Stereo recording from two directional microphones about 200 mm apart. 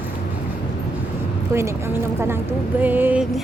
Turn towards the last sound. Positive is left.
turn(degrees=-10)  # may be behind; listen again after turning